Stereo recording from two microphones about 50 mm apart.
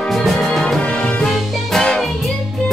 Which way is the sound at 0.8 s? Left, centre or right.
Left.